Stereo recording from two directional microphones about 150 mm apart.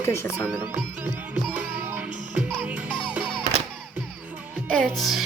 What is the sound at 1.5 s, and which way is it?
Music, 10° right (ahead or behind).